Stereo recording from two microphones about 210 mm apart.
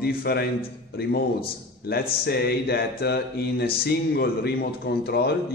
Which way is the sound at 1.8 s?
50° left (ahead or behind).